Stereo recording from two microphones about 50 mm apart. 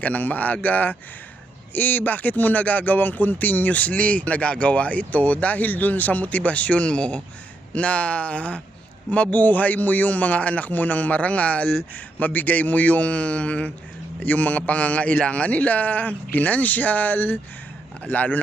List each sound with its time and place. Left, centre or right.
0.0 s speech: left
18.0 s speech: left